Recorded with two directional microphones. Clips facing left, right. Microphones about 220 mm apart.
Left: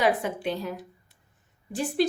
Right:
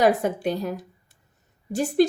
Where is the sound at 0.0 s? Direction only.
45° right (ahead or behind).